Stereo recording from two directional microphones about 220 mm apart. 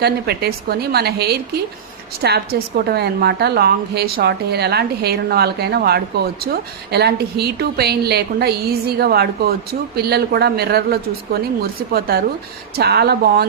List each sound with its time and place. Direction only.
0.0 s a woman's voice: 45° right (ahead or behind)